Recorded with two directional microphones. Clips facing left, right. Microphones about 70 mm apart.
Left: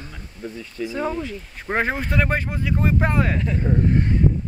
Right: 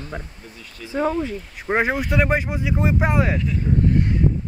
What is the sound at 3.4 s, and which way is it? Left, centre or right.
Speech, left.